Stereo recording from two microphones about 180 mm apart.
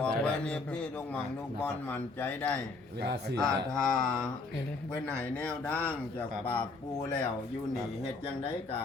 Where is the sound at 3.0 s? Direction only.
65° right (ahead or behind).